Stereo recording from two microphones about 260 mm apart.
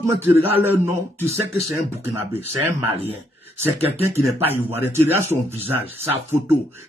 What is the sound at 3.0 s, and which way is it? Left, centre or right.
Speech, right.